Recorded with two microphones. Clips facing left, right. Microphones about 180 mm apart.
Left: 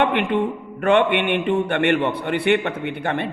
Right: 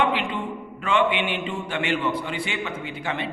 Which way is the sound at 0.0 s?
60° left (ahead or behind).